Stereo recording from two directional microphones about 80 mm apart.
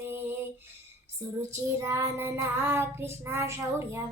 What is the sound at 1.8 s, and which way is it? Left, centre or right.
Child singing, right.